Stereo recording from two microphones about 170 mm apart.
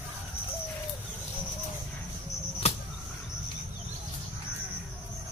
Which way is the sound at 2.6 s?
40° left (ahead or behind).